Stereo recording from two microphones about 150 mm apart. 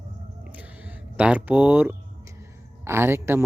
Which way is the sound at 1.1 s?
10° right (ahead or behind).